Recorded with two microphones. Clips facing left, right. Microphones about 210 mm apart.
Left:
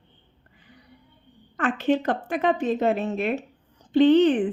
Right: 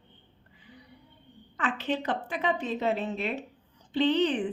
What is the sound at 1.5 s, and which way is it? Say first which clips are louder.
A woman's voice: left 8 dB; 50° left (ahead or behind).